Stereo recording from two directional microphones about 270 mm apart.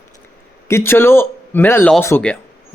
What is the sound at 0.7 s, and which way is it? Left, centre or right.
Speech, centre.